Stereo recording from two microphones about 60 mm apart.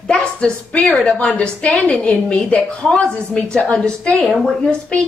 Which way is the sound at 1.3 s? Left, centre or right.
Centre.